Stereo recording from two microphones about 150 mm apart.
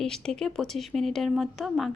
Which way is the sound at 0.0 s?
5° left (ahead or behind).